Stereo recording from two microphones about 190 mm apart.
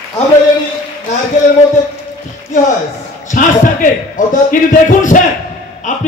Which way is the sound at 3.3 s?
45° left (ahead or behind).